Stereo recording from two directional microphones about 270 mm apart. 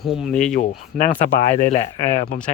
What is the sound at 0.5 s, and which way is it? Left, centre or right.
Speech, left.